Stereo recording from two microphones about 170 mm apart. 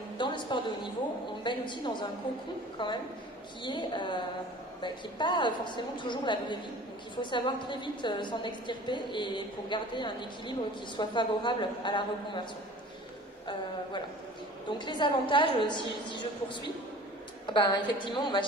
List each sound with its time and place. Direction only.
0.2 s a sound: 30° left (ahead or behind)
1.4 s a woman's voice: 25° left (ahead or behind)
14.7 s a woman's voice: 30° left (ahead or behind)